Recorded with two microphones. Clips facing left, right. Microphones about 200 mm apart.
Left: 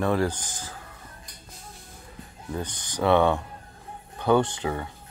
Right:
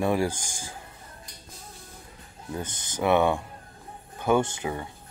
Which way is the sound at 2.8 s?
20° right (ahead or behind).